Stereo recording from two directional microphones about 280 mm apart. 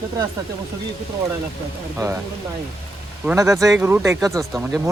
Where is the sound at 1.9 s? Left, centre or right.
Centre.